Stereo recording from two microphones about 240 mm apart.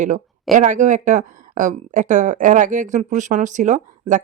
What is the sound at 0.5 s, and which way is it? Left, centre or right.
Speech, right.